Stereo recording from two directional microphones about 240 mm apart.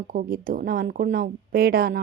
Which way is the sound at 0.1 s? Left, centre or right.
Right.